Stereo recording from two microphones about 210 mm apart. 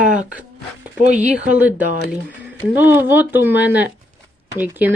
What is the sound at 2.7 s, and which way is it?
Speech, 10° right (ahead or behind).